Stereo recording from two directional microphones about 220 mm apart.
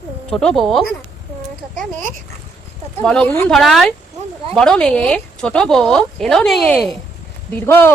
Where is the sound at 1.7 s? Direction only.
35° right (ahead or behind).